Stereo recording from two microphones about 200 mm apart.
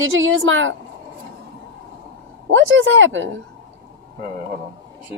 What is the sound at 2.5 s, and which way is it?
Speech, 75° right (ahead or behind).